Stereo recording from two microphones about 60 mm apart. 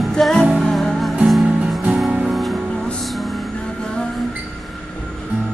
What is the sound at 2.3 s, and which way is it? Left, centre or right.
Music, centre.